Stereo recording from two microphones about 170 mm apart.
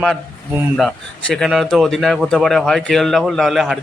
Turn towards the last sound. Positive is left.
turn(degrees=0)  # may be behind; listen again after turning